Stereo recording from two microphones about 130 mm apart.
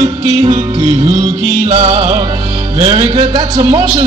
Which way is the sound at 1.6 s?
35° right (ahead or behind).